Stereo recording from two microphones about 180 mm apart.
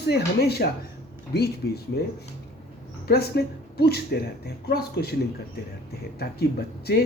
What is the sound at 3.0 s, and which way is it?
Speech, 60° left (ahead or behind).